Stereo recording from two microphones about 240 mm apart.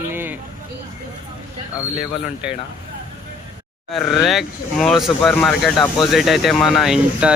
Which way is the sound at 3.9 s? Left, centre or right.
Centre.